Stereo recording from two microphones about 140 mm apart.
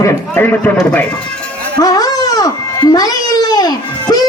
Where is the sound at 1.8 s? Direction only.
25° left (ahead or behind).